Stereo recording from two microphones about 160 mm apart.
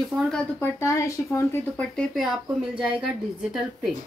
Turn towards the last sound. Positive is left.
turn(degrees=0)  # may be behind; listen again after turning